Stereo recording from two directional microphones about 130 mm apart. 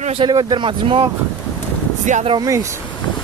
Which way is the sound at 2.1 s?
70° right (ahead or behind).